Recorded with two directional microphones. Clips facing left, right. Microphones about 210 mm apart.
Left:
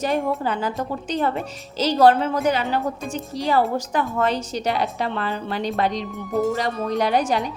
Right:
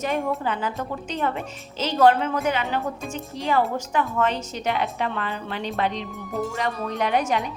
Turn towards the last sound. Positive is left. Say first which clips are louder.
# left 3 dB
turn(degrees=35)  # may be behind; listen again after turning